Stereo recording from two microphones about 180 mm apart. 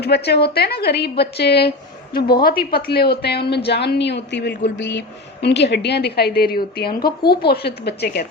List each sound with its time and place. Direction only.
0.0 s a woman's voice: 65° left (ahead or behind)